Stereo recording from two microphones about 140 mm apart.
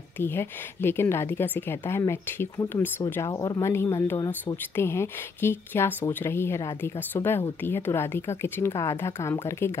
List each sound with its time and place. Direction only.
0.2 s a woman's voice: 15° left (ahead or behind)